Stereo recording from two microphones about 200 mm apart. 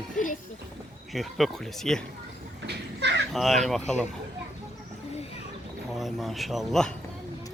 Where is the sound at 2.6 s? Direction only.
60° right (ahead or behind).